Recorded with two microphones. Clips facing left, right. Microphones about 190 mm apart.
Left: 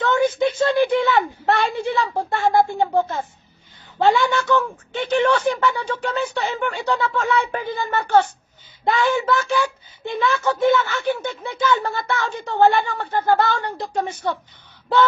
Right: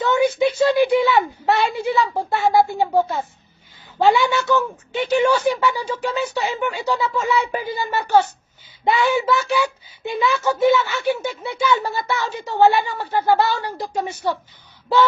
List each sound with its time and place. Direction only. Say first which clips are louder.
0.0 s speech: right 1 dB; 10° right (ahead or behind)